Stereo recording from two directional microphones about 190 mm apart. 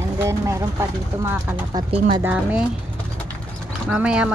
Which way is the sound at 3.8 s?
5° right (ahead or behind).